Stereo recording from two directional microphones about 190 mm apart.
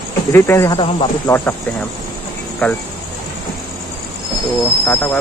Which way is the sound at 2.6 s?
10° left (ahead or behind).